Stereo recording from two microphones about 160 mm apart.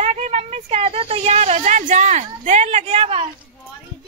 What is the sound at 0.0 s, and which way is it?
A woman's voice, 45° right (ahead or behind).